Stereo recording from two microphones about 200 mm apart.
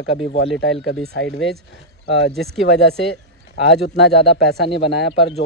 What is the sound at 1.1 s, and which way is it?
Speech, 60° left (ahead or behind).